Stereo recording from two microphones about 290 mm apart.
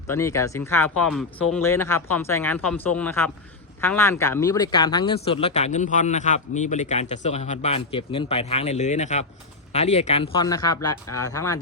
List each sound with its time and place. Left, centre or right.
0.1 s a man's voice: centre